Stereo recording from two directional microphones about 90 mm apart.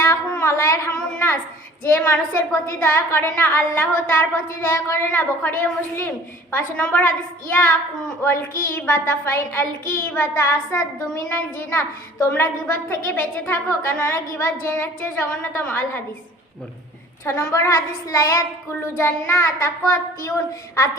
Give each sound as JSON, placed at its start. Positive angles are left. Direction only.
{"t": 0.0, "sound": "a sound", "side_deg": 30}
{"t": 1.8, "sound": "a woman's voice", "side_deg": 20}
{"t": 17.2, "sound": "a woman's voice", "side_deg": 30}